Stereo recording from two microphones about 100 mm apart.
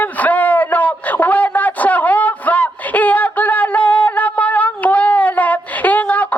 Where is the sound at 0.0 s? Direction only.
15° left (ahead or behind).